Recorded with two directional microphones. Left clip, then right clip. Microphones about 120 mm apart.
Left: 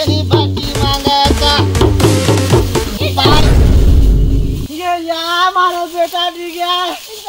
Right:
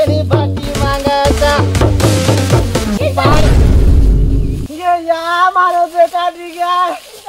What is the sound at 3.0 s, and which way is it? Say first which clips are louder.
Music: even; 25° right (ahead or behind).